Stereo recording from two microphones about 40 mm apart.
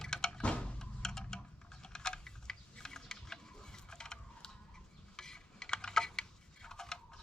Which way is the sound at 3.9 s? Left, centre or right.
Centre.